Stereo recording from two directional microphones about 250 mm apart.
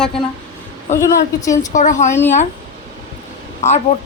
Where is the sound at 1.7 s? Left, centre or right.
Left.